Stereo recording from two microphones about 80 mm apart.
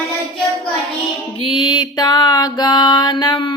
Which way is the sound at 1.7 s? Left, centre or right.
Left.